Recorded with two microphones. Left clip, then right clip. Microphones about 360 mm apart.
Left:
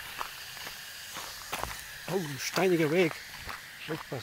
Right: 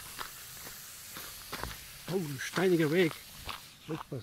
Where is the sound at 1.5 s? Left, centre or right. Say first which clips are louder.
Left 5 dB; centre.